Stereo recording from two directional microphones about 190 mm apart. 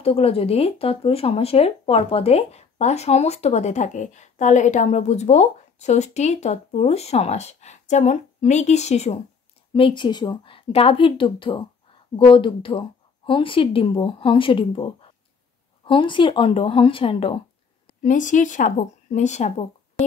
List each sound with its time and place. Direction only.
0.0 s a woman's voice: 30° left (ahead or behind)
18.0 s speech: 40° left (ahead or behind)